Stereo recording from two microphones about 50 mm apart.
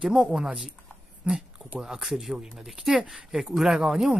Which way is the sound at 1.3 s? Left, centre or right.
Right.